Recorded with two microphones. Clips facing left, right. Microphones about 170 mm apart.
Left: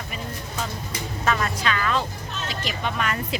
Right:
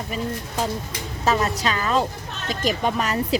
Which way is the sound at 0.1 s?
35° right (ahead or behind).